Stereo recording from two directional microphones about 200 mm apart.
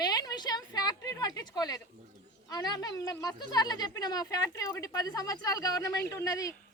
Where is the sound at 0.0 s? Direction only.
20° left (ahead or behind).